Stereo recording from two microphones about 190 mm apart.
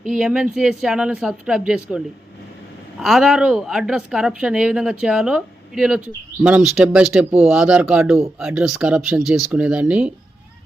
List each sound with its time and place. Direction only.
0.0 s a woman's voice: centre (ahead or behind)
3.0 s a woman's voice: centre (ahead or behind)